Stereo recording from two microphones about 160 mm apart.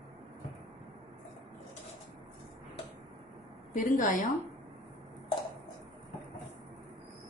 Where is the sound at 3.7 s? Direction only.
55° left (ahead or behind).